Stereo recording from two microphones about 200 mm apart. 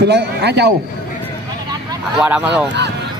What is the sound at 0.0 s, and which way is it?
Speech, 55° right (ahead or behind).